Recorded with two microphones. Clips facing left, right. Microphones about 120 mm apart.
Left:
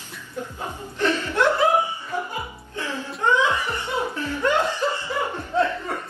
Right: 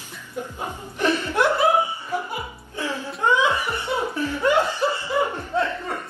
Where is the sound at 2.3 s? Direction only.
15° right (ahead or behind).